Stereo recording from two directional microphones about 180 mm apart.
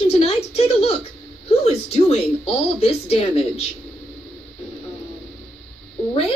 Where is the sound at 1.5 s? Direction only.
35° left (ahead or behind).